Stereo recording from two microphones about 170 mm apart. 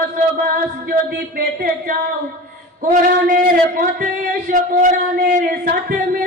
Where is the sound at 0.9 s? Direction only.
65° right (ahead or behind).